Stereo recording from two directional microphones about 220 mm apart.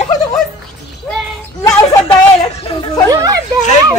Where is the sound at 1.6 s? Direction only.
15° left (ahead or behind).